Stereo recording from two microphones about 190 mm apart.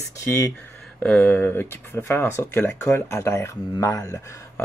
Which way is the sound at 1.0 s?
5° left (ahead or behind).